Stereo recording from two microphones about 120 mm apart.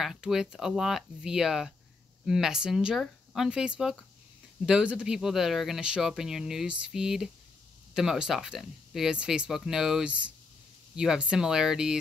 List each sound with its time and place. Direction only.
0.0 s speech: 5° right (ahead or behind)